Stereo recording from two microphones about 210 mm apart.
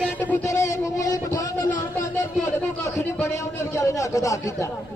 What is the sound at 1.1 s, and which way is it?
Vehicle, 15° left (ahead or behind).